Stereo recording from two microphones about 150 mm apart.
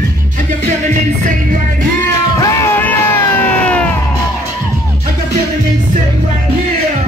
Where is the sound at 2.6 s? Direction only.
10° left (ahead or behind).